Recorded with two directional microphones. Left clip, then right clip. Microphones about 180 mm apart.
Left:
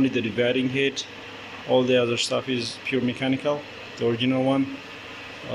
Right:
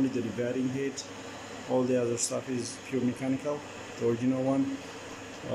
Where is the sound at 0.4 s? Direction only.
Centre (ahead or behind).